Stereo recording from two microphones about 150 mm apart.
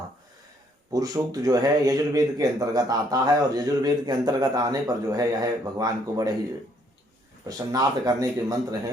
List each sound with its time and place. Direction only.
0.9 s speech: 25° right (ahead or behind)
7.4 s speech: 25° right (ahead or behind)